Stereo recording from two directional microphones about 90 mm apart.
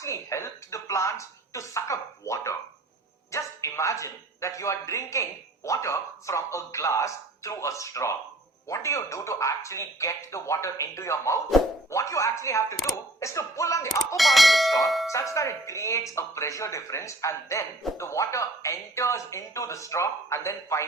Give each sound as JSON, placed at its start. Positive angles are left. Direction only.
{"t": 0.0, "sound": "speech", "side_deg": 35}
{"t": 14.2, "sound": "bell", "side_deg": 0}
{"t": 15.1, "sound": "speech", "side_deg": 35}